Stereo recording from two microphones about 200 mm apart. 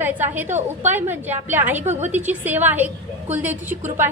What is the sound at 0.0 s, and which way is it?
A woman's voice, 10° right (ahead or behind).